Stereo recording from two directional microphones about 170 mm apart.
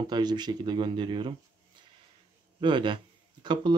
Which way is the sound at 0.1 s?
25° right (ahead or behind).